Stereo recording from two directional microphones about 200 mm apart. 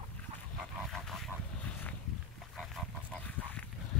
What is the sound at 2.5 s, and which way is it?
Pig, 5° left (ahead or behind).